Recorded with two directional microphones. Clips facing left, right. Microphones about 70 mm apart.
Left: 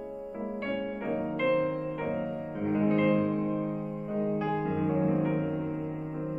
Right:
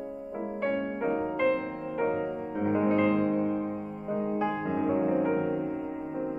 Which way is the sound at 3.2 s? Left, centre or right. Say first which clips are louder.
Right 2 dB; centre.